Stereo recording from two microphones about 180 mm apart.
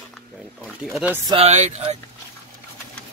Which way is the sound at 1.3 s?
35° right (ahead or behind).